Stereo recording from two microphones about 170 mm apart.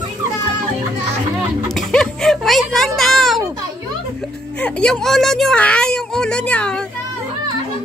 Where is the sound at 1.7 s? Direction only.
5° left (ahead or behind).